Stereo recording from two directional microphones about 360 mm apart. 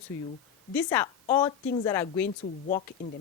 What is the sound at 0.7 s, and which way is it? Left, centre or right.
A woman's voice, centre.